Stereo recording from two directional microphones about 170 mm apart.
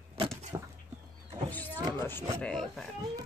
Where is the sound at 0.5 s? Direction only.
25° right (ahead or behind).